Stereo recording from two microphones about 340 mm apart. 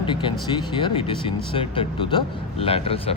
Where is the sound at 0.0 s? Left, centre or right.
Centre.